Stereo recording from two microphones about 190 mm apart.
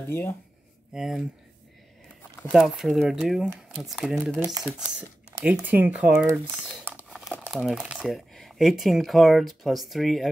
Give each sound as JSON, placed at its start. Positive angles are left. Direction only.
{"t": 0.1, "sound": "speech", "side_deg": 10}
{"t": 0.9, "sound": "speech", "side_deg": -5}
{"t": 2.5, "sound": "speech", "side_deg": 0}
{"t": 4.4, "sound": "speech", "side_deg": -20}
{"t": 5.4, "sound": "speech", "side_deg": -10}
{"t": 7.1, "sound": "crumpling", "side_deg": 0}
{"t": 7.4, "sound": "speech", "side_deg": 0}